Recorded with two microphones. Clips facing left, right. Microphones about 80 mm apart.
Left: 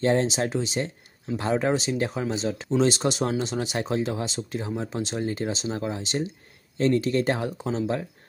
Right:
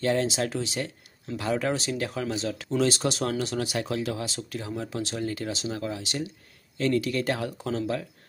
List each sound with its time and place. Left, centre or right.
0.0 s speech: left